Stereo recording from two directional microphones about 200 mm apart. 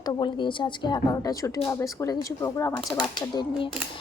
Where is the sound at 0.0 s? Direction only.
20° left (ahead or behind).